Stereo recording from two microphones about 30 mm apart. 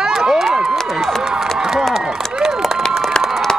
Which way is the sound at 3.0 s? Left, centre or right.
Centre.